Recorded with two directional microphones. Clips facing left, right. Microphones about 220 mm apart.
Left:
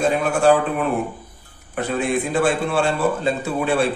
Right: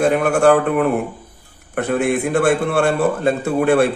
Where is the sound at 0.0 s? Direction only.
60° right (ahead or behind).